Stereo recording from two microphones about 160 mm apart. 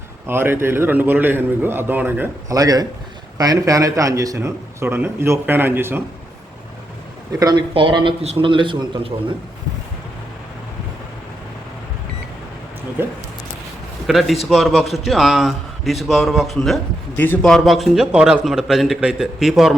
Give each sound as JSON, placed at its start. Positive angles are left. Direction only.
{"t": 0.3, "sound": "a man's voice", "side_deg": -15}
{"t": 7.3, "sound": "a man's voice", "side_deg": -25}
{"t": 14.1, "sound": "a man's voice", "side_deg": 0}
{"t": 17.2, "sound": "a man's voice", "side_deg": 10}